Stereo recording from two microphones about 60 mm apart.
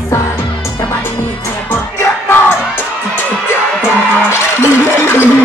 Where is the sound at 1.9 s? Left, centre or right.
Left.